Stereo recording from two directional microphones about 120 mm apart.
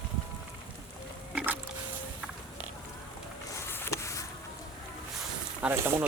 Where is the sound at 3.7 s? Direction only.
20° left (ahead or behind).